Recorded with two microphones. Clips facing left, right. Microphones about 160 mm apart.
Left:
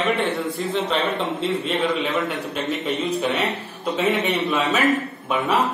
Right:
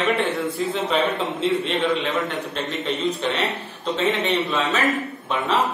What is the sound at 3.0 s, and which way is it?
Speech, 10° left (ahead or behind).